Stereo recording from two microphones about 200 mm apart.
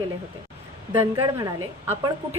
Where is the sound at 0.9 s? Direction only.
20° right (ahead or behind).